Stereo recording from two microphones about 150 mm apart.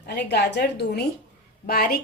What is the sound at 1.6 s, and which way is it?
Speech, 80° left.